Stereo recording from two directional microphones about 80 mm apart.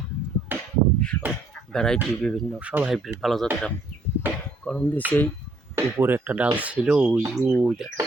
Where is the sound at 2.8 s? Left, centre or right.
Centre.